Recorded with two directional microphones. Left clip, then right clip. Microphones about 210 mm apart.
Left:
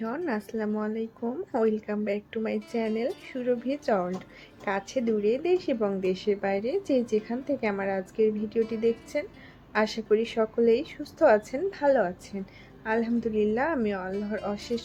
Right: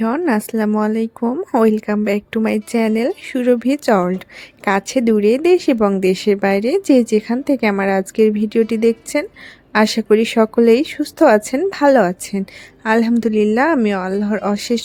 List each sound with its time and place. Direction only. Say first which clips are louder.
0.0 s speech: right 13 dB; 50° right (ahead or behind)